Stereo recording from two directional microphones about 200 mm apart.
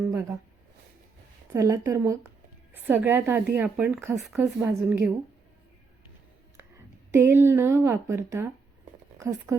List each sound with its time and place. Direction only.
0.1 s a sound: 15° right (ahead or behind)
1.5 s a woman's voice: 15° right (ahead or behind)
7.1 s a woman's voice: 15° right (ahead or behind)